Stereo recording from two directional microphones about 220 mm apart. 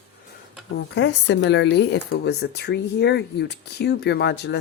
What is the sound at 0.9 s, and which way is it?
Speech, 55° left (ahead or behind).